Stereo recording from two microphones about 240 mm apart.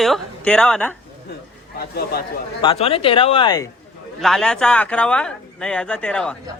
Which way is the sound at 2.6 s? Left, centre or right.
Left.